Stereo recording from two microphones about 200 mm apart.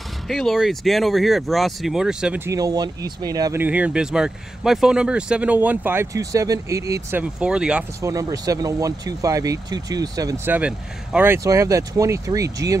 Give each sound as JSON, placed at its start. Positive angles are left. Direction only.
{"t": 0.3, "sound": "speech", "side_deg": 0}
{"t": 8.0, "sound": "speech", "side_deg": -15}